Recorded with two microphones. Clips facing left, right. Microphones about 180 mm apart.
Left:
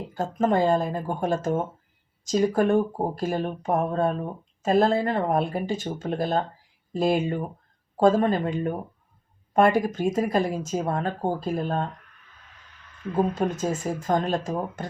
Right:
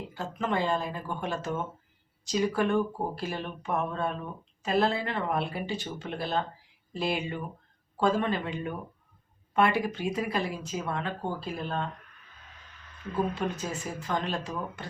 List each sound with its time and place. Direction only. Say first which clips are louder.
0.1 s speech: left 8 dB; 45° left (ahead or behind)
13.1 s speech: left 6 dB; 45° left (ahead or behind)